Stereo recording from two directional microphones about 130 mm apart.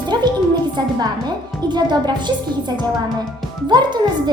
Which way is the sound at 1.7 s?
35° right (ahead or behind).